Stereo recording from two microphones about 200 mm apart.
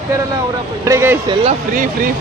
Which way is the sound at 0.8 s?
10° right (ahead or behind).